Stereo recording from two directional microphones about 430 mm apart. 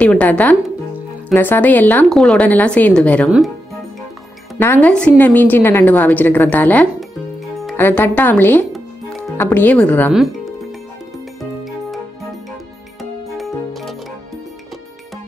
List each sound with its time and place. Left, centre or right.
0.0 s a woman's voice: centre
4.6 s a woman's voice: centre
13.4 s music: centre